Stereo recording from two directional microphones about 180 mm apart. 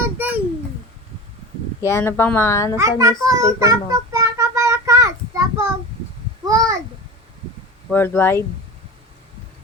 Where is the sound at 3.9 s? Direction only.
20° right (ahead or behind).